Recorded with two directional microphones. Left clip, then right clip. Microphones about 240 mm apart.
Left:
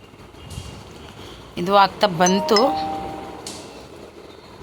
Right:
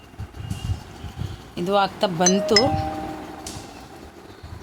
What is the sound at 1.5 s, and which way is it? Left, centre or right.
Speech, centre.